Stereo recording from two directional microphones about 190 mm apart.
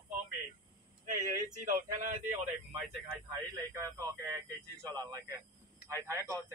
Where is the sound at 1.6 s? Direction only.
40° right (ahead or behind).